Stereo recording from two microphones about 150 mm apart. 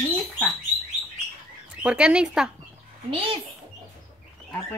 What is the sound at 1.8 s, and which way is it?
Speech, 5° right (ahead or behind).